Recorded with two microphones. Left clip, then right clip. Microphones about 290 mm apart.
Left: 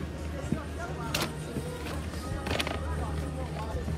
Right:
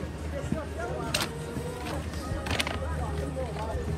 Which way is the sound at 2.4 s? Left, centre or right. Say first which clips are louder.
Right 1 dB; right.